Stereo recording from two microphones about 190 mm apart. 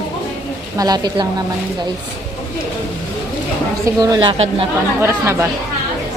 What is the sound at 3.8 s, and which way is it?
Speech, 20° right (ahead or behind).